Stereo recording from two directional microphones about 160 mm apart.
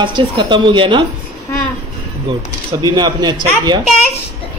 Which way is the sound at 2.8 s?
25° right (ahead or behind).